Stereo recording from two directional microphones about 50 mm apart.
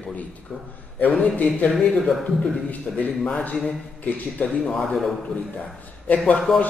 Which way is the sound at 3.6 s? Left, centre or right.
Left.